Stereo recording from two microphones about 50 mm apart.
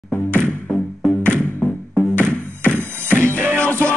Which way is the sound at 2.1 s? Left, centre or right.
Left.